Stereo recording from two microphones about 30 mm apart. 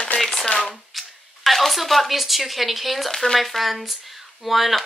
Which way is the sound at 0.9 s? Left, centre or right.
Centre.